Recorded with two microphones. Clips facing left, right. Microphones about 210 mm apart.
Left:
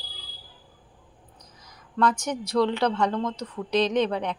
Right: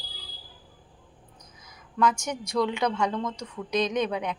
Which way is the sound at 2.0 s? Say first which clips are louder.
Left 1 dB; 10° right (ahead or behind).